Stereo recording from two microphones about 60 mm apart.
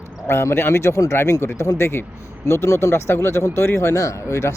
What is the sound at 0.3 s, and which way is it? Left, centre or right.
Speech, left.